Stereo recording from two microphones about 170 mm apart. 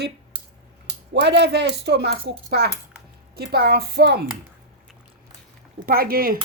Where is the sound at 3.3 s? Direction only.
70° right (ahead or behind).